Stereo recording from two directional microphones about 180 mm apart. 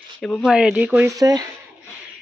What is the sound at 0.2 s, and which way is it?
Speech, centre (ahead or behind).